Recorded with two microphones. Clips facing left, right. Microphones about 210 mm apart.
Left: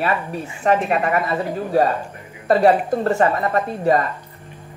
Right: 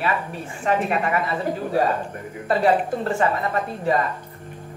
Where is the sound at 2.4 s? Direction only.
40° left (ahead or behind).